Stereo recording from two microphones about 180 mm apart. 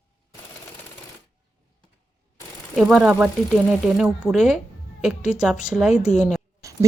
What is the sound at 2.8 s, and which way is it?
Speech, 5° right (ahead or behind).